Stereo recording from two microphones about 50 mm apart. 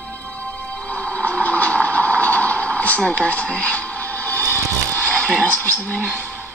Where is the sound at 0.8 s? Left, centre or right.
Left.